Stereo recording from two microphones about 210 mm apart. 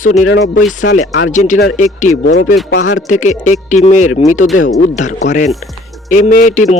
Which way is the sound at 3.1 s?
35° left (ahead or behind).